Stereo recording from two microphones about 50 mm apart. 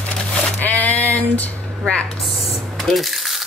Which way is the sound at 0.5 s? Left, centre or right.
Left.